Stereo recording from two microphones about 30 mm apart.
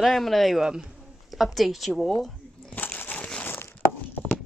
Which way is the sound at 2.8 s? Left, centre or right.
Left.